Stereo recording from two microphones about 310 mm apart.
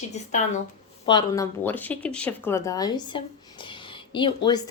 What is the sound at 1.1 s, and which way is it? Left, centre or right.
A woman's voice, centre.